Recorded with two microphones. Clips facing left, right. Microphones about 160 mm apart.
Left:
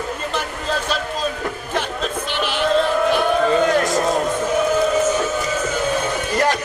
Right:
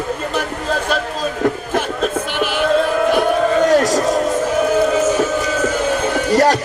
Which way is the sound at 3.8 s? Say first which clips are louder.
Right 3 dB; 40° right (ahead or behind).